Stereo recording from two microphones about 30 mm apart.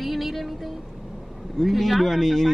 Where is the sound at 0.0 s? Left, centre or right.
Centre.